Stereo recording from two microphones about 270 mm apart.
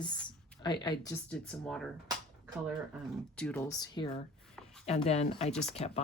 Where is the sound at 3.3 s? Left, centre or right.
Centre.